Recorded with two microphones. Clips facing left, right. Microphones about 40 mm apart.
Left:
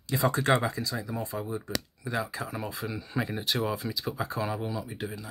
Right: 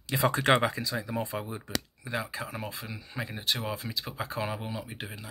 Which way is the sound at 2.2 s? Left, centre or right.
Centre.